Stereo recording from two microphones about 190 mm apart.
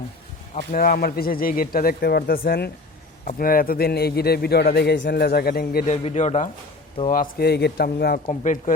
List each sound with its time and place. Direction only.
0.5 s a man's voice: 45° left (ahead or behind)
5.8 s speech: 35° left (ahead or behind)
7.1 s speech: 50° left (ahead or behind)
8.3 s speech: 40° left (ahead or behind)